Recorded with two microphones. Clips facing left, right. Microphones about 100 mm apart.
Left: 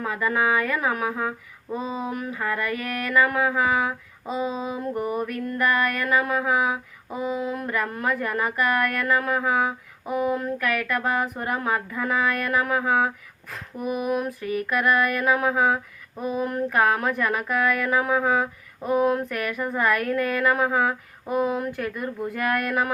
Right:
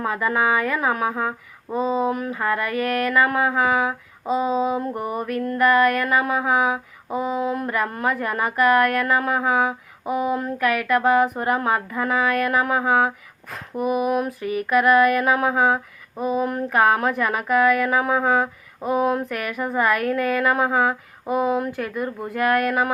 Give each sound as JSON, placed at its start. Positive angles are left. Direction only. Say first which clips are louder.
{"t": 0.0, "sound": "speech", "louder": "right 2 dB", "side_deg": -15}
{"t": 0.8, "sound": "speech", "louder": "right 3 dB", "side_deg": -25}
{"t": 1.7, "sound": "a sound", "louder": "right 7 dB", "side_deg": -35}
{"t": 2.0, "sound": "speech", "louder": "right 5 dB", "side_deg": -5}